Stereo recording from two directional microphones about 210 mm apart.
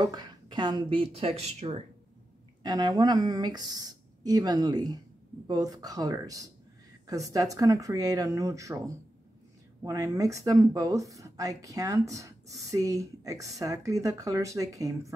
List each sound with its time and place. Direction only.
0.0 s speech: 20° right (ahead or behind)
2.6 s speech: 20° right (ahead or behind)